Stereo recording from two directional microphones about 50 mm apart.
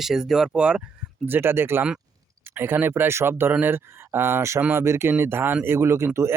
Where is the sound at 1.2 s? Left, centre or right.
Right.